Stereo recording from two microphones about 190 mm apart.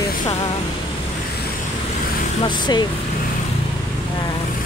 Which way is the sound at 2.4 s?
25° left (ahead or behind).